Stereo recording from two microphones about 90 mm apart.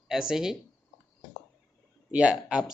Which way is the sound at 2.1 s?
10° right (ahead or behind).